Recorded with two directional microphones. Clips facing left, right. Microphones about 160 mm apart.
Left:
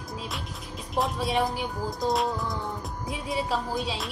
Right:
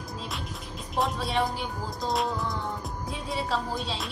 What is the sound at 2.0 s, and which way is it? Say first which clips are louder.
Speech: left 2 dB; centre (ahead or behind).